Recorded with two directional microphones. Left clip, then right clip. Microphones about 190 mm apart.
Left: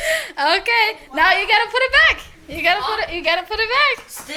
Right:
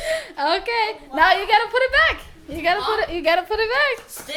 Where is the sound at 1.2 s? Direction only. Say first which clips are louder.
Left 1 dB; 25° right (ahead or behind).